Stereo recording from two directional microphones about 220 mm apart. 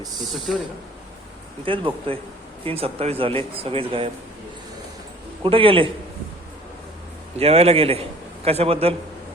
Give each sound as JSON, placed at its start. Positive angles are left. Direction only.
{"t": 0.0, "sound": "speech", "side_deg": 0}
{"t": 1.6, "sound": "speech", "side_deg": -25}
{"t": 5.4, "sound": "speech", "side_deg": -25}
{"t": 7.3, "sound": "speech", "side_deg": -25}